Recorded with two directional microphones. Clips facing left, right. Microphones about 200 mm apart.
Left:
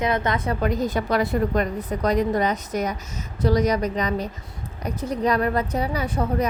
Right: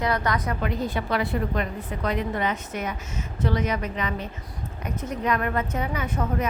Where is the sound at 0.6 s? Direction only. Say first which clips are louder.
Left 4 dB; 40° left (ahead or behind).